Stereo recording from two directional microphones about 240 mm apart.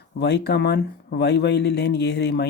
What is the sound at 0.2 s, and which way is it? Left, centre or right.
Speech, left.